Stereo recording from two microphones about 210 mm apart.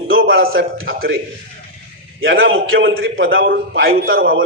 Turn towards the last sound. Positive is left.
turn(degrees=-70)  # may be behind; listen again after turning